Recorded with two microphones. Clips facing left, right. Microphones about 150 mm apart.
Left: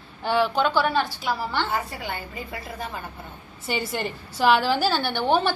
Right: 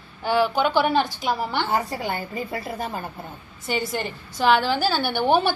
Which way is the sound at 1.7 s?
35° right (ahead or behind).